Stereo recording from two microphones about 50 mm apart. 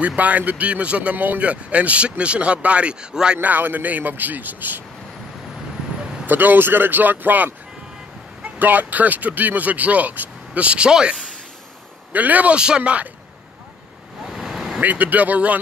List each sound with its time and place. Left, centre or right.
0.0 s speech: right
1.1 s speech: right
1.4 s speech: right
3.3 s speech: right
6.2 s speech: right
8.5 s speech: right; by 11.1 s centre
12.1 s speech: right
12.5 s speech: centre
14.2 s vehicle: centre
14.8 s speech: right